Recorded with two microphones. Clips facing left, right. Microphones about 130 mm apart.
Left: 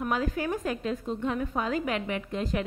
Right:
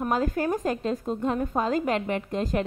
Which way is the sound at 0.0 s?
40° right (ahead or behind).